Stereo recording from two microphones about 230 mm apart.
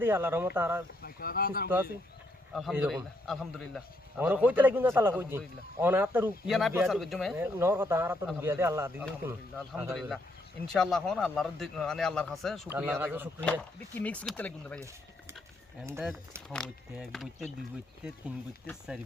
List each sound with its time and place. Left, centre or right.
0.0 s a man's voice: centre
1.0 s speech: left
2.5 s a man's voice: centre
15.9 s a man's voice: centre
16.5 s speech: centre